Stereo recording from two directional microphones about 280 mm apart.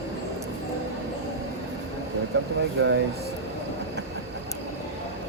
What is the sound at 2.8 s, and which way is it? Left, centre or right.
Speech, right.